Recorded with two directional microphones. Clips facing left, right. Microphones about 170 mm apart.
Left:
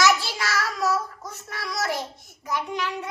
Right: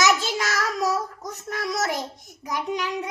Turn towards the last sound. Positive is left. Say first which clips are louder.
# right 1 dB
turn(degrees=-15)  # may be behind; listen again after turning